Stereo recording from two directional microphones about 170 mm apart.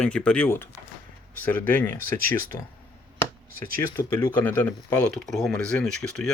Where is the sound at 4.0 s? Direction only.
10° left (ahead or behind).